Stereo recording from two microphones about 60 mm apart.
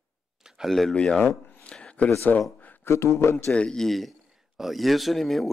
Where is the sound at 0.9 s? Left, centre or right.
Centre.